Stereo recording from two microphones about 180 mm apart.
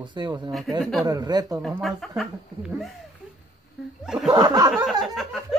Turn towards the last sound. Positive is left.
turn(degrees=0)  # may be behind; listen again after turning